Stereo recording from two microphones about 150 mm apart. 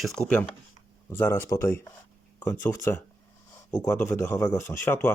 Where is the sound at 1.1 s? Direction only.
15° left (ahead or behind).